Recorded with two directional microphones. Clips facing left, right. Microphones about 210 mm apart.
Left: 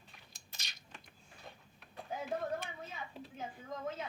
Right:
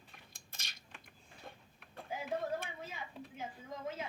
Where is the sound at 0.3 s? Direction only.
50° right (ahead or behind).